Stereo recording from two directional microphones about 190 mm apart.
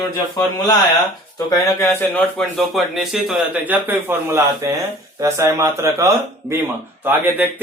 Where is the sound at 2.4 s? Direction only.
Centre (ahead or behind).